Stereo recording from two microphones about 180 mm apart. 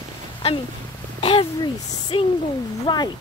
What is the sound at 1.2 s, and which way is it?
Speech, 30° left (ahead or behind).